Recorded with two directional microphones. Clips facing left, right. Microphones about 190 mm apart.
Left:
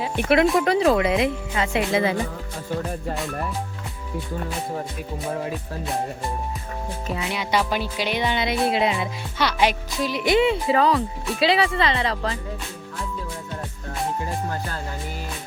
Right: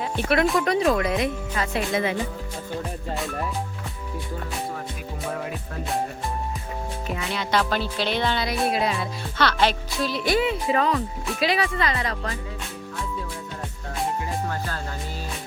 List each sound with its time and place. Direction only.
0.6 s speech: 25° left (ahead or behind)
7.3 s speech: 15° left (ahead or behind); by 12.4 s 30° left (ahead or behind)